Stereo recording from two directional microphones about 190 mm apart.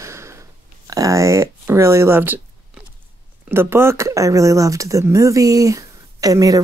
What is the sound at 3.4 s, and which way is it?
Speech, 10° right (ahead or behind).